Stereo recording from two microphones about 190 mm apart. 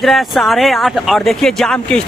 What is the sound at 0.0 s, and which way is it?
Speech, centre (ahead or behind).